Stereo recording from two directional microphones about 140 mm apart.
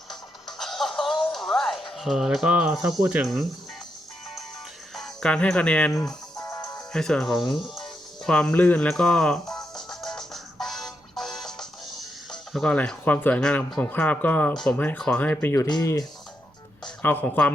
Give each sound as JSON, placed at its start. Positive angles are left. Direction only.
{"t": 0.1, "sound": "music", "side_deg": 0}
{"t": 4.9, "sound": "speech", "side_deg": 5}
{"t": 6.3, "sound": "music", "side_deg": 25}
{"t": 6.9, "sound": "speech", "side_deg": 5}
{"t": 7.8, "sound": "music", "side_deg": 5}
{"t": 12.3, "sound": "speech", "side_deg": 5}
{"t": 15.6, "sound": "speech", "side_deg": 25}
{"t": 17.0, "sound": "speech", "side_deg": 15}